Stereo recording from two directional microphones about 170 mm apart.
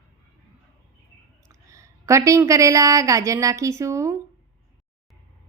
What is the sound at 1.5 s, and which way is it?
A woman's voice, 20° right (ahead or behind).